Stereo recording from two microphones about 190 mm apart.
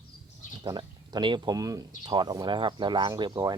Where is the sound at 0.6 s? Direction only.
25° right (ahead or behind).